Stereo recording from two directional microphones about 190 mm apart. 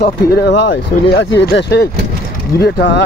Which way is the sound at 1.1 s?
70° left (ahead or behind).